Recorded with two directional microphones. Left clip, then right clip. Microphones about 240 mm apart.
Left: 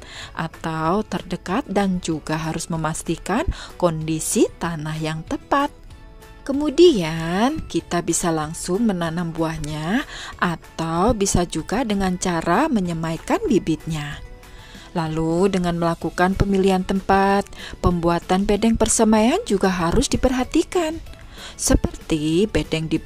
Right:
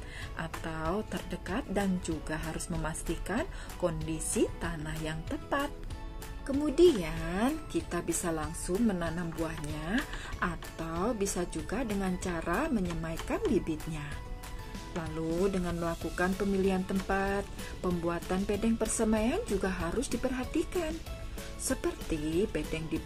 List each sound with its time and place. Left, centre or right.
0.2 s speech: left